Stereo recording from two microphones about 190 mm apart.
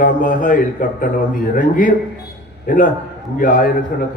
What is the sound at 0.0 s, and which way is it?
A man's voice, 45° left (ahead or behind).